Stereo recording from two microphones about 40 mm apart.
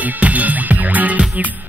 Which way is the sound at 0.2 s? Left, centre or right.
Right.